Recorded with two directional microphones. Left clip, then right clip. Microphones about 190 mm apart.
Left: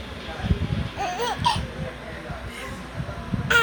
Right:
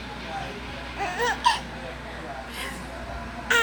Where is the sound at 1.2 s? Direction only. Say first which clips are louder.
Right 2 dB; 15° right (ahead or behind).